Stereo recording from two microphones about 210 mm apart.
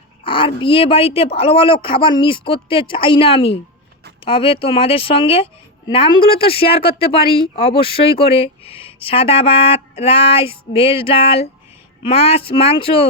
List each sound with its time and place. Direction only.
0.3 s speech: 25° left (ahead or behind)